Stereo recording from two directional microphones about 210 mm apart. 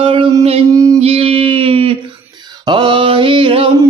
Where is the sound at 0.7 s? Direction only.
15° right (ahead or behind).